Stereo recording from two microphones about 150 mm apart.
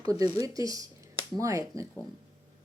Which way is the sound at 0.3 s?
25° right (ahead or behind).